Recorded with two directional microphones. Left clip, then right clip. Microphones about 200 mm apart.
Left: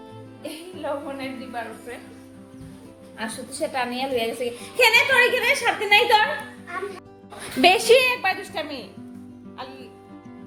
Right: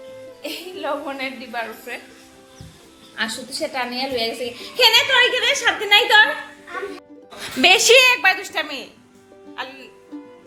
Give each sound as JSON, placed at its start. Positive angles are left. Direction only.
{"t": 0.4, "sound": "a woman's voice", "side_deg": -20}
{"t": 3.6, "sound": "a woman's voice", "side_deg": 0}
{"t": 5.4, "sound": "a woman's voice", "side_deg": 5}
{"t": 7.6, "sound": "a woman's voice", "side_deg": 5}